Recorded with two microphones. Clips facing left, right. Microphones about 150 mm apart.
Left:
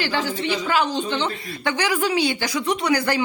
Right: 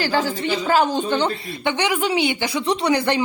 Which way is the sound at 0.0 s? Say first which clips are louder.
Right 3 dB; 45° right (ahead or behind).